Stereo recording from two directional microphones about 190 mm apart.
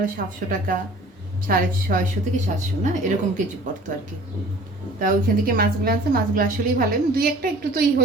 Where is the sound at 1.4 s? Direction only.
45° right (ahead or behind).